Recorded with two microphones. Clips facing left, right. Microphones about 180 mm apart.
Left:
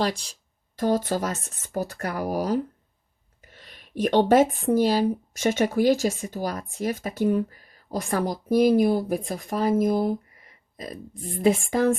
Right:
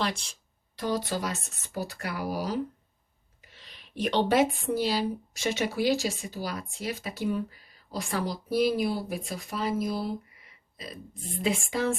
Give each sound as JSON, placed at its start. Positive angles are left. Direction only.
{"t": 0.0, "sound": "speech", "side_deg": 40}
{"t": 0.8, "sound": "speech", "side_deg": 50}